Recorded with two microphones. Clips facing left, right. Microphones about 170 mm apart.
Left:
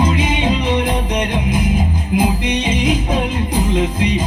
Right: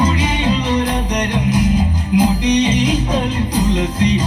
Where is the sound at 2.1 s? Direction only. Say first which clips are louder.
Right 4 dB; 55° left (ahead or behind).